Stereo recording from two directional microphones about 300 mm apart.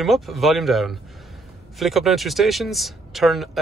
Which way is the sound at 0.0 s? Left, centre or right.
Centre.